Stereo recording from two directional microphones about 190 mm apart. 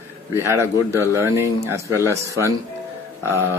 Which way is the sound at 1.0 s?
15° right (ahead or behind).